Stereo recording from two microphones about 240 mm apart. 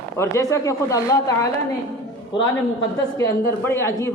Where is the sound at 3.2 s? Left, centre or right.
Centre.